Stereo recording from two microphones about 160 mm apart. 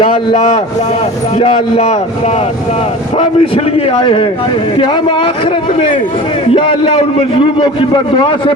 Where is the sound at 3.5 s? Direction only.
35° left (ahead or behind).